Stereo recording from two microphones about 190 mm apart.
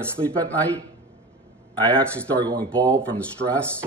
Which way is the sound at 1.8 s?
5° left (ahead or behind).